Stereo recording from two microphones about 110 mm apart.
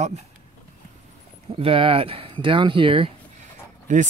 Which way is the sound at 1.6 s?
55° right (ahead or behind).